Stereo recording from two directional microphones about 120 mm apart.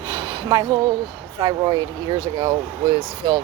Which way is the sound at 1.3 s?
35° right (ahead or behind).